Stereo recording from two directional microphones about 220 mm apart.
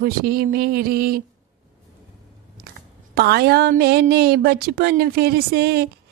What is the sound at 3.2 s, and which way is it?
Speech, 45° right (ahead or behind).